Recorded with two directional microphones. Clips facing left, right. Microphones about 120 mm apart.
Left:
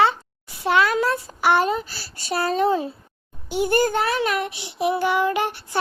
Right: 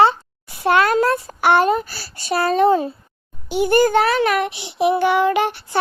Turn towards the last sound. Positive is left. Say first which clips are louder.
# right 5 dB
turn(degrees=-80)